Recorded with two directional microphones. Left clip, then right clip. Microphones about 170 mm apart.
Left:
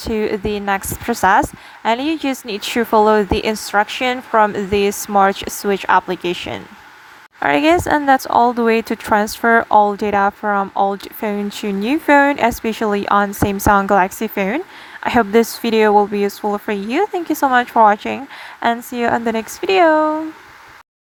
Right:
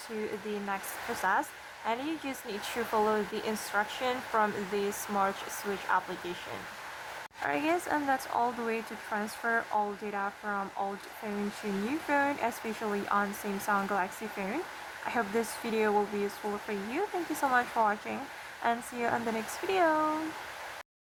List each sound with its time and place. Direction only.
0.0 s a woman's voice: 55° left (ahead or behind)
7.4 s a woman's voice: 60° left (ahead or behind)